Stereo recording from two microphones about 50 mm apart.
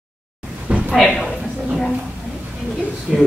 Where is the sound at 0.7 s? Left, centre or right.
Right.